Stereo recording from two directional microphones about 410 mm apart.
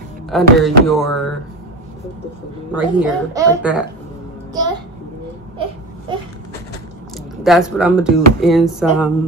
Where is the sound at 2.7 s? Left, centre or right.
Centre.